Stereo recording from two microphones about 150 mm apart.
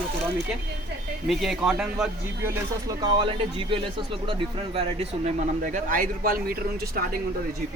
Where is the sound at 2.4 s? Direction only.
15° right (ahead or behind).